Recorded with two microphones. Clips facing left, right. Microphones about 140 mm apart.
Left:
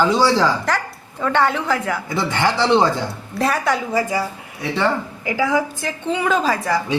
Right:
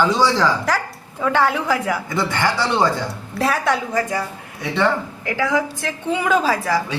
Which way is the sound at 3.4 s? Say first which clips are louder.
Even; centre (ahead or behind).